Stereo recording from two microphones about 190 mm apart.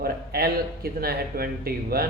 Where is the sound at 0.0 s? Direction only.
55° right (ahead or behind).